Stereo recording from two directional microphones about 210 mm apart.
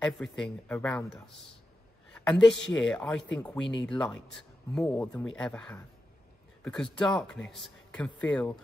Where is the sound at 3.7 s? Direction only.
20° left (ahead or behind).